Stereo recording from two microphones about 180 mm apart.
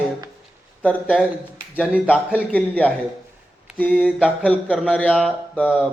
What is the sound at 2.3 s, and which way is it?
Speech, 5° left (ahead or behind).